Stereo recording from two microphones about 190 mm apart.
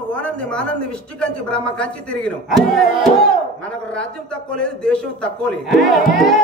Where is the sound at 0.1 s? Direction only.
5° left (ahead or behind).